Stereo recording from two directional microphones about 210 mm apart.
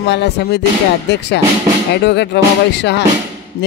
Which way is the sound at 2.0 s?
55° left (ahead or behind).